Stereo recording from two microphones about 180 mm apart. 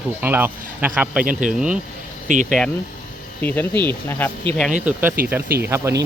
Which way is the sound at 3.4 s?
10° left (ahead or behind).